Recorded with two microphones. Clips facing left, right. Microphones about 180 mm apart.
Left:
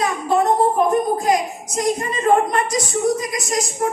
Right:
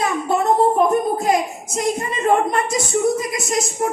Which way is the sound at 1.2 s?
30° right (ahead or behind).